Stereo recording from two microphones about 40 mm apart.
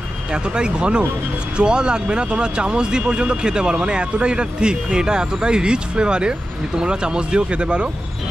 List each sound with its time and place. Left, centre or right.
0.3 s speech: right